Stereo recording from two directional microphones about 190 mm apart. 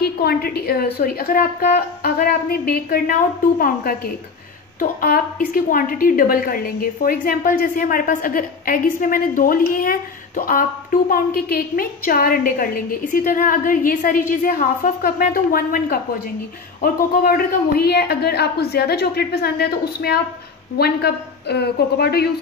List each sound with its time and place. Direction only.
0.0 s a woman's voice: 55° left (ahead or behind)